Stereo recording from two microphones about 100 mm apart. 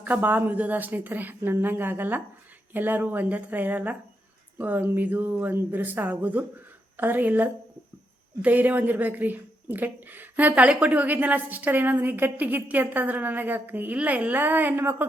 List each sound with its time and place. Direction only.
0.0 s a woman's voice: 15° right (ahead or behind)